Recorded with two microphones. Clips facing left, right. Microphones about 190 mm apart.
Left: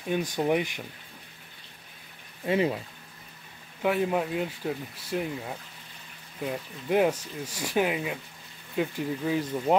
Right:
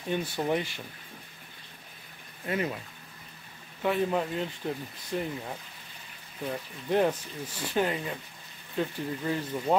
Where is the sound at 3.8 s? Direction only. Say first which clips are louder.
Left 1 dB; 10° left (ahead or behind).